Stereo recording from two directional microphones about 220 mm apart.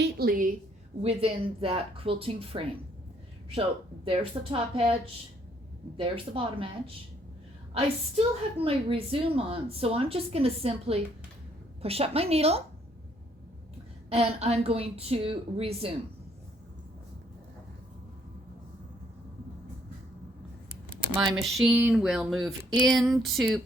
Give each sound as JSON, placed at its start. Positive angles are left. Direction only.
{"t": 0.0, "sound": "a woman's voice", "side_deg": -45}
{"t": 1.0, "sound": "a woman's voice", "side_deg": -25}
{"t": 4.0, "sound": "a woman's voice", "side_deg": -25}
{"t": 6.0, "sound": "a woman's voice", "side_deg": -25}
{"t": 14.1, "sound": "a woman's voice", "side_deg": -30}
{"t": 21.3, "sound": "speech", "side_deg": 0}